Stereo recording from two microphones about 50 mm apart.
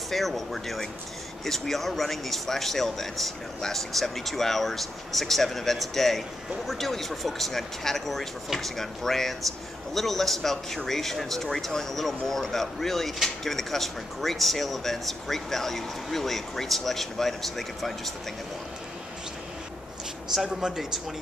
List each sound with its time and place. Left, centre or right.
0.1 s speech: centre
20.4 s speech: centre